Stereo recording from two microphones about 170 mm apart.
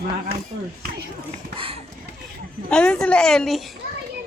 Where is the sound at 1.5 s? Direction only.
30° right (ahead or behind).